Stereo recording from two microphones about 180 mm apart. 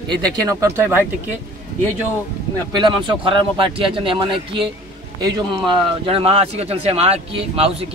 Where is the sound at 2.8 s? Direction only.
25° right (ahead or behind).